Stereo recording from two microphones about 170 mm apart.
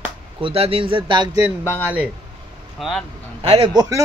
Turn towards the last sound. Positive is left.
turn(degrees=-20)  # may be behind; listen again after turning